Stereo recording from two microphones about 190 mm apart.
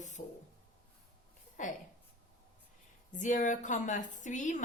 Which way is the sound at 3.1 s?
40° left (ahead or behind).